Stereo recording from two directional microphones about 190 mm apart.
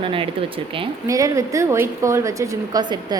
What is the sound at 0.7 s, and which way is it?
A woman's voice, 15° right (ahead or behind).